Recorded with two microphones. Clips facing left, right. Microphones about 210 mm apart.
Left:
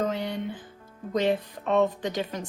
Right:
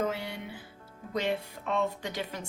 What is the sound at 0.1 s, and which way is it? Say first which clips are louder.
Music: left 6 dB; 10° right (ahead or behind).